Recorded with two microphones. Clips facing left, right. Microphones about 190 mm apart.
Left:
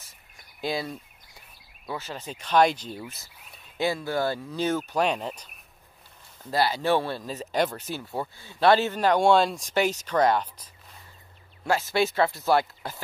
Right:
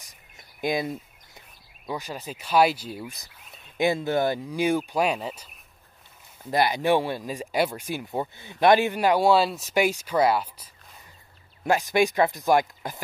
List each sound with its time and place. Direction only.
0.0 s a sound: 15° right (ahead or behind)
1.9 s speech: 15° right (ahead or behind)
6.5 s speech: 15° right (ahead or behind)